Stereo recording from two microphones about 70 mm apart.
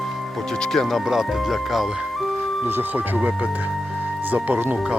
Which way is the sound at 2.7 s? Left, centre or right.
Right.